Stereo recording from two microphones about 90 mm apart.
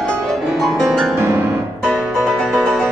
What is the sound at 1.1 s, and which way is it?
Piano, 25° right (ahead or behind).